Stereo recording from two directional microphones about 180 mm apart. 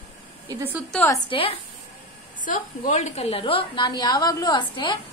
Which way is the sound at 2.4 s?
45° left (ahead or behind).